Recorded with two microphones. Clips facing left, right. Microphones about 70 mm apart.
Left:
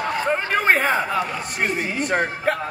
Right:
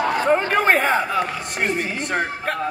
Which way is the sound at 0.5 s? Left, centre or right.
Centre.